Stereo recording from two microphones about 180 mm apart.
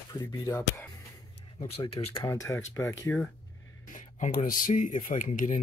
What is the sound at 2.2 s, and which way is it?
Speech, 15° left (ahead or behind).